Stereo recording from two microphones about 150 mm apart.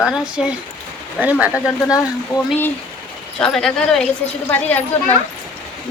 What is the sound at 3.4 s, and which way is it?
Speech, 5° left (ahead or behind).